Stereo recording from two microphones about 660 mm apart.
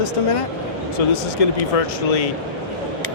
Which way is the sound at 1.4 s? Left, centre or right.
Left.